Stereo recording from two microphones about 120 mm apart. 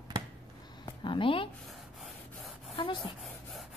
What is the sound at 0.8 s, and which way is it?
Speech, 45° left (ahead or behind).